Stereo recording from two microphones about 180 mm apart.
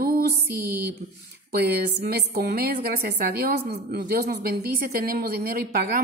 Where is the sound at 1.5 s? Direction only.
60° right (ahead or behind).